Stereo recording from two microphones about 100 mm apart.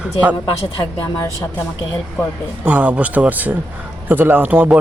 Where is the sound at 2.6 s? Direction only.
15° right (ahead or behind).